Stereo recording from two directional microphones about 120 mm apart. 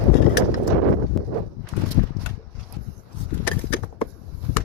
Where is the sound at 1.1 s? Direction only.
5° left (ahead or behind).